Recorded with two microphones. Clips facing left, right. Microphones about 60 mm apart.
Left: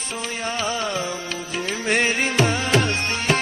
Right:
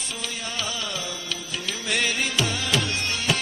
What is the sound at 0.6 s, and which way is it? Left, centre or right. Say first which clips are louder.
Music: left 7 dB; left.